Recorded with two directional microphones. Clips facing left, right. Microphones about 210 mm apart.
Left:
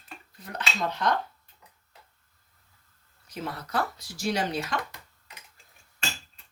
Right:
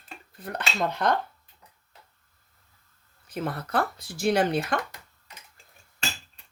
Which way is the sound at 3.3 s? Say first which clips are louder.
Right 4 dB; 55° right (ahead or behind).